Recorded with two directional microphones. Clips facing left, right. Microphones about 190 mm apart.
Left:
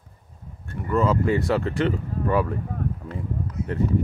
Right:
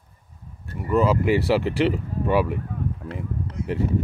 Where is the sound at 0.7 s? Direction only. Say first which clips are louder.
Right 2 dB; 15° right (ahead or behind).